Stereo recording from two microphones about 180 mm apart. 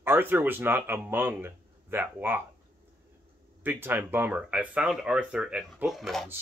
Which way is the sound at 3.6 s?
10° right (ahead or behind).